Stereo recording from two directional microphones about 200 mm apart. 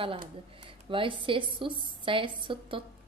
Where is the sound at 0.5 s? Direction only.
25° right (ahead or behind).